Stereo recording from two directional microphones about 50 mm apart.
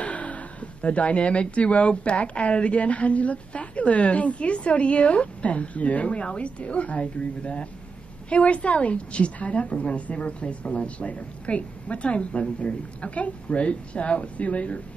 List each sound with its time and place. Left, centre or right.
0.0 s speech: left